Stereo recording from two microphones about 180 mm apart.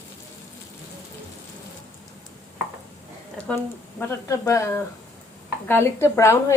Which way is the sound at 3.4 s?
5° left (ahead or behind).